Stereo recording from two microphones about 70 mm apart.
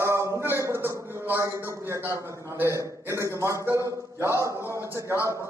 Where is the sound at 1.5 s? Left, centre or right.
Right.